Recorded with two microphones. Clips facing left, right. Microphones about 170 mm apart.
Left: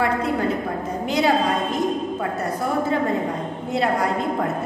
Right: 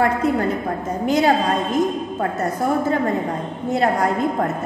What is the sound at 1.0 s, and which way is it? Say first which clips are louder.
Speech: right 3 dB; 45° right (ahead or behind).